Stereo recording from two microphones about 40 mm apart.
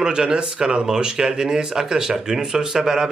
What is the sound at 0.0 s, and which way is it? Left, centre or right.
Speech, centre.